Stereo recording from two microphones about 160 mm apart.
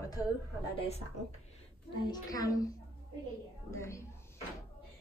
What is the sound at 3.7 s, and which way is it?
Speech, 20° left (ahead or behind).